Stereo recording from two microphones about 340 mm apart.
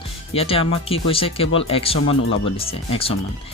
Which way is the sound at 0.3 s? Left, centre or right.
Centre.